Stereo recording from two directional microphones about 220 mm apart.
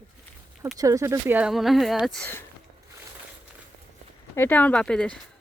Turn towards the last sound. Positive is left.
turn(degrees=5)  # may be behind; listen again after turning